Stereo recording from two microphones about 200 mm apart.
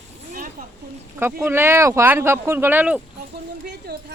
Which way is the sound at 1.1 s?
10° right (ahead or behind).